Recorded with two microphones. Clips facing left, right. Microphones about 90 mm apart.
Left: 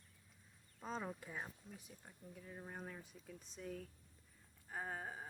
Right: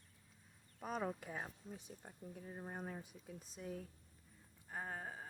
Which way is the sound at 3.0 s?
15° right (ahead or behind).